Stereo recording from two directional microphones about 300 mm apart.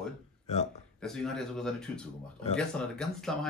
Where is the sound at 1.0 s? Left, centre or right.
Centre.